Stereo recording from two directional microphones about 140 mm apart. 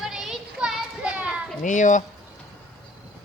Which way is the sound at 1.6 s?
65° left (ahead or behind).